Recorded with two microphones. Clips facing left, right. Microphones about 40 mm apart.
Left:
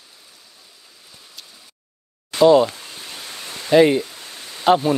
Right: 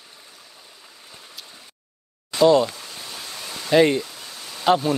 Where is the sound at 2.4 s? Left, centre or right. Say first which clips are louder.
Left 3 dB; centre.